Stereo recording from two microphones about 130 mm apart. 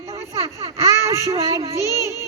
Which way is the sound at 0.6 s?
25° right (ahead or behind).